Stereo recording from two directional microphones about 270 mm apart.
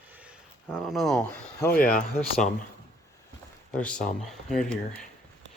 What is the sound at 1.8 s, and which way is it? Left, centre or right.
Speech, left.